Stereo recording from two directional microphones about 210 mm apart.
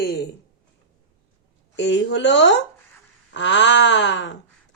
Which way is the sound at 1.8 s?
60° left (ahead or behind).